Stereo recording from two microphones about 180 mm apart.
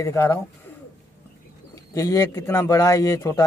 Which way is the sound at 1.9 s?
20° left (ahead or behind).